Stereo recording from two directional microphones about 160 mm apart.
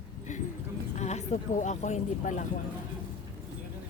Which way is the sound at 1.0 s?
45° left (ahead or behind).